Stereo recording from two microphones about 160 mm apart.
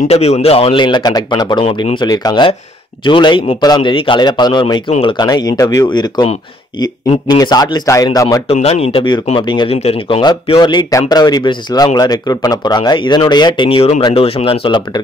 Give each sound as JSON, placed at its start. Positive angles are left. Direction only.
{"t": 0.1, "sound": "speech", "side_deg": 40}
{"t": 7.2, "sound": "speech", "side_deg": 25}
{"t": 8.5, "sound": "speech", "side_deg": 40}